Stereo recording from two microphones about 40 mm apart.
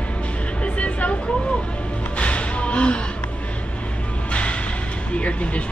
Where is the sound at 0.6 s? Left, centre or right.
Left.